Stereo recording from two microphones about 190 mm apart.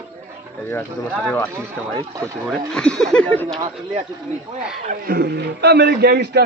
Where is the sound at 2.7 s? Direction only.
5° left (ahead or behind).